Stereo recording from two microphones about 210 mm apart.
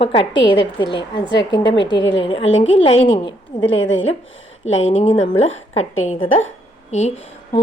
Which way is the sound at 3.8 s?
65° left (ahead or behind).